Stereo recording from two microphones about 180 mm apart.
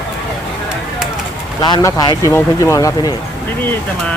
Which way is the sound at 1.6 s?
20° left (ahead or behind).